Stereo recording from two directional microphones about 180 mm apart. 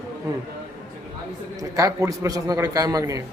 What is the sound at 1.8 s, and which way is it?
A man's voice, 20° right (ahead or behind).